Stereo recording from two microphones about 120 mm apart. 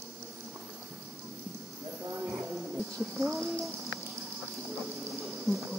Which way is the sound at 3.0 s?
Centre (ahead or behind).